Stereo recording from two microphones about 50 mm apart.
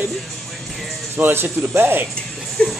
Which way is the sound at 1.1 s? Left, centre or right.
Right.